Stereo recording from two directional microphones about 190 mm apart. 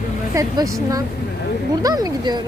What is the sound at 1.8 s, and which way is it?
Speech, 20° right (ahead or behind).